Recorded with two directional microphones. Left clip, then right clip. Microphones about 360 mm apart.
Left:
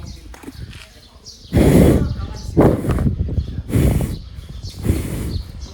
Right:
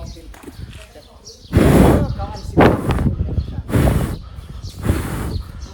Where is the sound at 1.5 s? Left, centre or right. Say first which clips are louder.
Right 1 dB; right.